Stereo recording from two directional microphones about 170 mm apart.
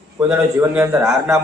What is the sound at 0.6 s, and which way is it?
Speech, 10° right (ahead or behind).